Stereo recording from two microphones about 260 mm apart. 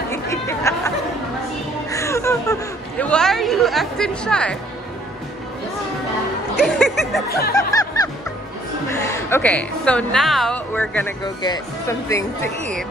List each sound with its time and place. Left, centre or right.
0.1 s chatter: centre
1.9 s a sound: centre
3.0 s chatter: centre
6.6 s music: centre
7.2 s speech: left
7.5 s music: centre
9.0 s a woman's voice: centre